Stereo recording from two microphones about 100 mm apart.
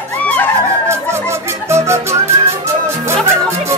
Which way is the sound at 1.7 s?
25° right (ahead or behind).